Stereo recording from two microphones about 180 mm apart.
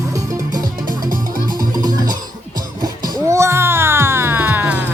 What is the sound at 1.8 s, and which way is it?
Music, 25° right (ahead or behind).